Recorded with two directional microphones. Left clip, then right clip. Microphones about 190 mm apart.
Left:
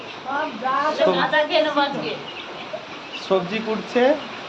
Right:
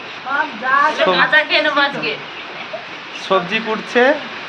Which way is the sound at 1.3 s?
20° left (ahead or behind).